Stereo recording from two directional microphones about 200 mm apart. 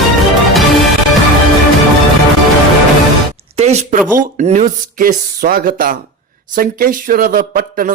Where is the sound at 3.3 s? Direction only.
35° right (ahead or behind).